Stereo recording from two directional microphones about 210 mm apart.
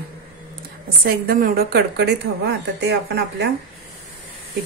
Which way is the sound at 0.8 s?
45° right (ahead or behind).